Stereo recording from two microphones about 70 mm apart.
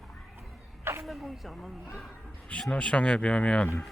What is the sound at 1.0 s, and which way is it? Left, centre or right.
Speech, centre.